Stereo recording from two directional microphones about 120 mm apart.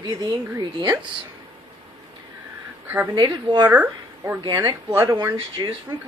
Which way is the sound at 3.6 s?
15° right (ahead or behind).